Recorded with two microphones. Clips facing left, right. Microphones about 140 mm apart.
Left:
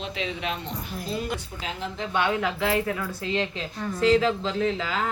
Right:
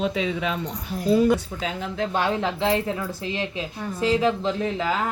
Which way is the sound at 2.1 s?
35° right (ahead or behind).